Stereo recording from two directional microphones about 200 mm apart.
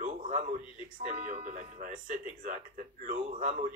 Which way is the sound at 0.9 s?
40° right (ahead or behind).